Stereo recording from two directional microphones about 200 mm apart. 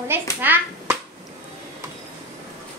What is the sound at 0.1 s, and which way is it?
Speech, 10° right (ahead or behind).